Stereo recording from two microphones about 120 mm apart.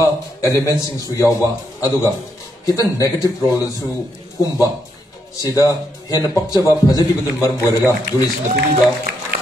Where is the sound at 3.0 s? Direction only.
30° left (ahead or behind).